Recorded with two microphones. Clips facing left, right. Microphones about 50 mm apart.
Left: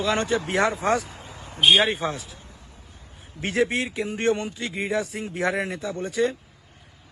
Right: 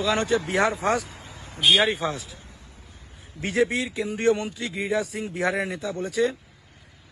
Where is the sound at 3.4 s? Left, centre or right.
Left.